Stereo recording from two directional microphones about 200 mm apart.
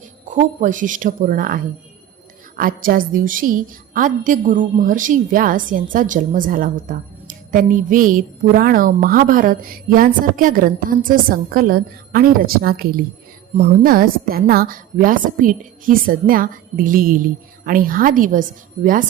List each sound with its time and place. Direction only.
0.3 s a woman's voice: 40° right (ahead or behind)